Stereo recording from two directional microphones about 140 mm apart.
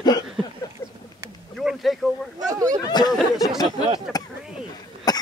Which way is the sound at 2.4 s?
25° right (ahead or behind).